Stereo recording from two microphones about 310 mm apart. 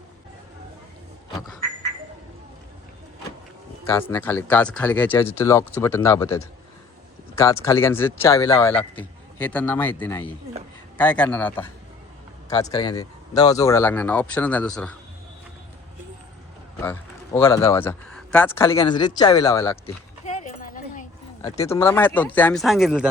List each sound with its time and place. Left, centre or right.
3.8 s speech: centre
16.8 s speech: centre
20.2 s a sound: left
21.4 s speech: centre